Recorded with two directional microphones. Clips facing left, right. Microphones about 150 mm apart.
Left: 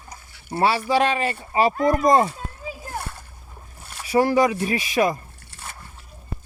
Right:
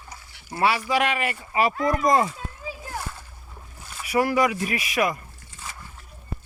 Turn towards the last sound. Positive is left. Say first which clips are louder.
# left 1 dB
turn(degrees=60)  # may be behind; listen again after turning